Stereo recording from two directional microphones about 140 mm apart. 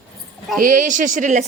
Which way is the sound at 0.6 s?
70° right (ahead or behind).